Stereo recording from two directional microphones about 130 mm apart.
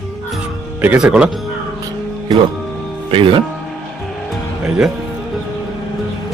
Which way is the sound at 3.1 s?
45° right (ahead or behind).